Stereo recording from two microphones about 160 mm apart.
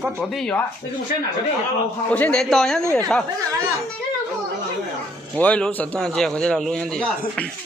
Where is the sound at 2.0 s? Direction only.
10° left (ahead or behind).